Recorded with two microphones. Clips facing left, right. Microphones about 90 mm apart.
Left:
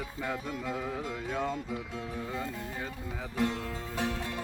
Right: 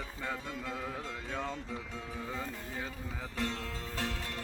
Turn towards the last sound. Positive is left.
turn(degrees=15)  # may be behind; listen again after turning